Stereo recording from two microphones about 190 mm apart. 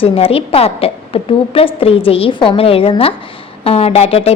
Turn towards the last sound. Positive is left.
turn(degrees=30)  # may be behind; listen again after turning